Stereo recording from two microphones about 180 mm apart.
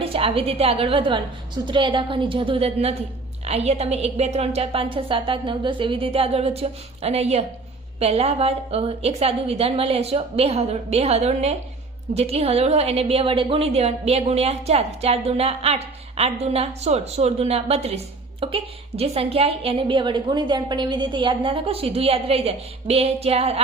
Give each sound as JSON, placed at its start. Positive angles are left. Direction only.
{"t": 0.0, "sound": "a woman's voice", "side_deg": -30}